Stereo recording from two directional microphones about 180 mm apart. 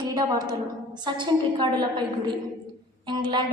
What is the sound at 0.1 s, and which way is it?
A woman's voice, 25° right (ahead or behind).